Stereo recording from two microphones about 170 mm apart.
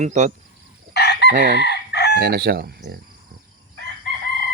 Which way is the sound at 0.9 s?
75° left (ahead or behind).